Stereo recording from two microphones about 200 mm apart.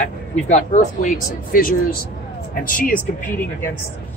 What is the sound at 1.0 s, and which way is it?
Speech, 45° left (ahead or behind).